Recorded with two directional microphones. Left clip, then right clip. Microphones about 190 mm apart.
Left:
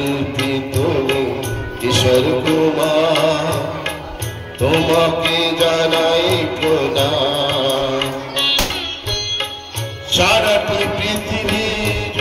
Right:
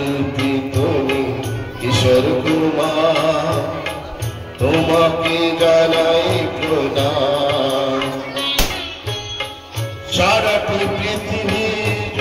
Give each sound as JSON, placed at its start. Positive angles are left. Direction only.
{"t": 0.4, "sound": "music", "side_deg": 45}
{"t": 10.1, "sound": "music", "side_deg": 45}